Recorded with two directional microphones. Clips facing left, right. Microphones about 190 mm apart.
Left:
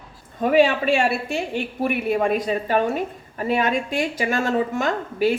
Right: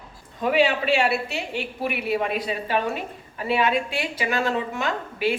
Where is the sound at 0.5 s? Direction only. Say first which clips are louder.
Left 4 dB; 50° left (ahead or behind).